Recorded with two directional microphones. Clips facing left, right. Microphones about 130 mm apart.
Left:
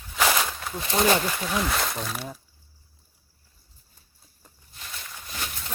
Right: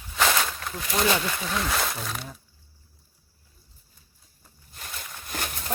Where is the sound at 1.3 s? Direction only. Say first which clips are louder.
Left 1 dB; centre (ahead or behind).